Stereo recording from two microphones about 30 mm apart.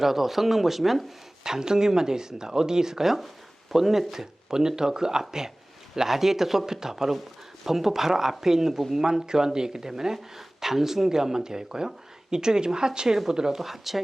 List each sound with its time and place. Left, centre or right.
0.0 s speech: centre
1.5 s speech: right
4.5 s speech: right
6.0 s speech: centre
13.6 s speech: centre